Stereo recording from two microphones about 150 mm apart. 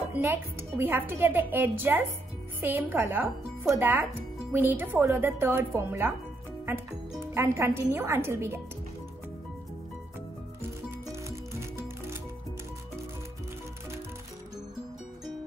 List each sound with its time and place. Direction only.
0.1 s speech: 15° right (ahead or behind)
7.3 s speech: 15° right (ahead or behind)